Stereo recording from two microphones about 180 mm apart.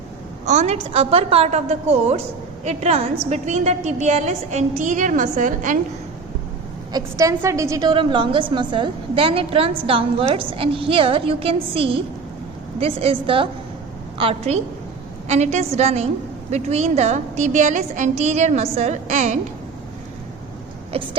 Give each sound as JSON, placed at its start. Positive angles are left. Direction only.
{"t": 0.4, "sound": "a woman's voice", "side_deg": -40}
{"t": 6.9, "sound": "a woman's voice", "side_deg": -15}
{"t": 20.9, "sound": "a woman's voice", "side_deg": -30}